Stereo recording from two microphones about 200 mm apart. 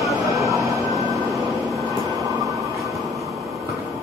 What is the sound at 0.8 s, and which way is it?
Train, 15° right (ahead or behind).